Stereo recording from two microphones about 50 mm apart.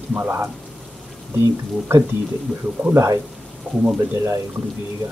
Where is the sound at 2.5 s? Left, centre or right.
Right.